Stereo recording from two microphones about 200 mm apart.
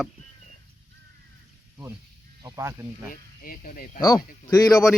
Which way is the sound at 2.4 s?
15° right (ahead or behind).